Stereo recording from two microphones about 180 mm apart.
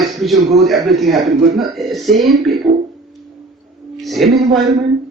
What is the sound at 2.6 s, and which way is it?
Speech, 20° right (ahead or behind).